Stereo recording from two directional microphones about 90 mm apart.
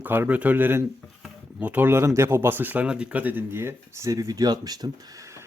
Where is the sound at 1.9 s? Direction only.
30° right (ahead or behind).